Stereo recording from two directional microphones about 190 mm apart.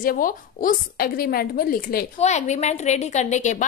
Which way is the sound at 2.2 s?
35° left (ahead or behind).